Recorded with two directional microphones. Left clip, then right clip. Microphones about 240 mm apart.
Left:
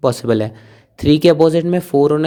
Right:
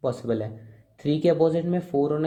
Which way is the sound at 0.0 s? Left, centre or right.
Left.